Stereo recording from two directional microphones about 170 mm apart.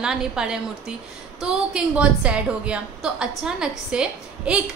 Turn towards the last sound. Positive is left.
turn(degrees=-5)  # may be behind; listen again after turning